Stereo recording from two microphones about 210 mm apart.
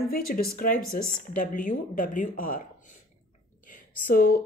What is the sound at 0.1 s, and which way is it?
A woman's voice, 45° left (ahead or behind).